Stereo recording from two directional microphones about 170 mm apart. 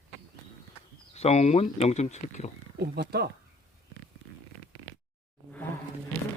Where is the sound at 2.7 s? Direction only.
75° right (ahead or behind).